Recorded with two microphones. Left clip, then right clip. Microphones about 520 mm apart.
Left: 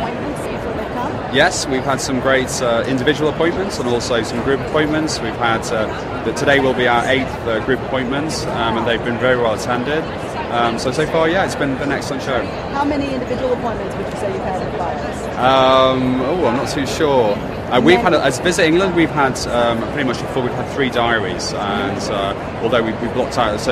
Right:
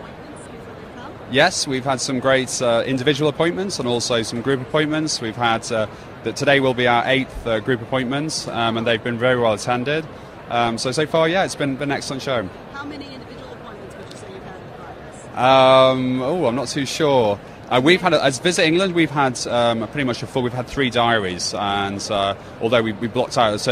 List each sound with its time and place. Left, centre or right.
1.3 s speech: right
15.4 s speech: right